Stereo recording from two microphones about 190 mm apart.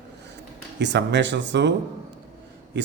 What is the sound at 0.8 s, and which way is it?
Speech, 65° right (ahead or behind).